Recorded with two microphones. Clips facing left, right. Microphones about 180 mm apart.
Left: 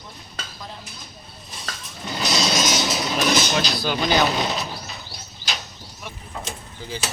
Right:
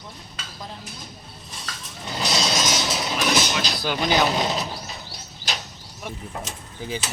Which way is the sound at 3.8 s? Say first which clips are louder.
Right 1 dB; 15° right (ahead or behind).